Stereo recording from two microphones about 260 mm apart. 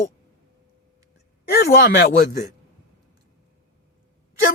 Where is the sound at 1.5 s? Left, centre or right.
Left.